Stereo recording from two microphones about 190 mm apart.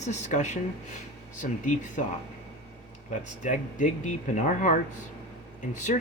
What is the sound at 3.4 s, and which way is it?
Speech, 40° left (ahead or behind).